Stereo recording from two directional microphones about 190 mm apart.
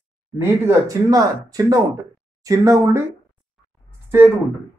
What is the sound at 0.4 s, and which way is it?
Speech, 15° right (ahead or behind).